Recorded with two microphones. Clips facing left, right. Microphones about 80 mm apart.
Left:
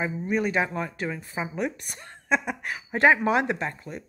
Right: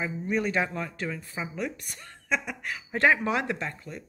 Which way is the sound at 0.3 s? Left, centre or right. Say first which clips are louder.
Left 2 dB; centre.